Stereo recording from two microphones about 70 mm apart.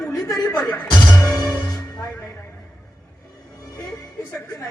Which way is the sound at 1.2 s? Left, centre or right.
Left.